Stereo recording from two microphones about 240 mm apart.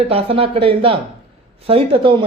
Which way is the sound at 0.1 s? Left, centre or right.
Right.